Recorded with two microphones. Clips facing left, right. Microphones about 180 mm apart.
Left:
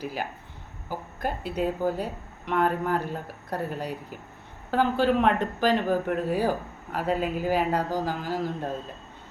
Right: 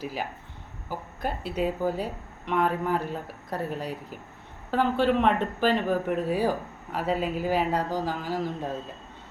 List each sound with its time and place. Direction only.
0.0 s speech: centre (ahead or behind)